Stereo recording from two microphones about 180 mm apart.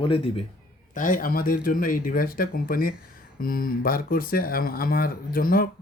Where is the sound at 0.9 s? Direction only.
50° left (ahead or behind).